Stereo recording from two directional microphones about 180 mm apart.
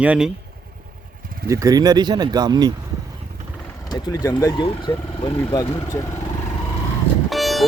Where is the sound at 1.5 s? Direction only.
20° right (ahead or behind).